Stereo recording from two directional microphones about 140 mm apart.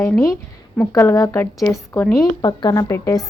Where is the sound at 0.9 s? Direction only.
20° left (ahead or behind).